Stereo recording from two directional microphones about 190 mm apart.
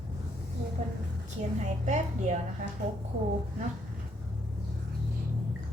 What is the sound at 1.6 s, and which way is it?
Speech, 40° right (ahead or behind).